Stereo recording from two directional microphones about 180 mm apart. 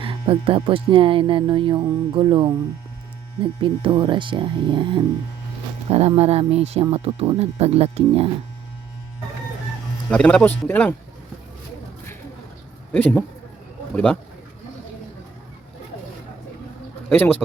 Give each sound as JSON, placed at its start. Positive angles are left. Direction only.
{"t": 0.0, "sound": "speech", "side_deg": -30}
{"t": 10.1, "sound": "speech", "side_deg": 5}
{"t": 12.9, "sound": "speech", "side_deg": 10}
{"t": 17.1, "sound": "speech", "side_deg": 10}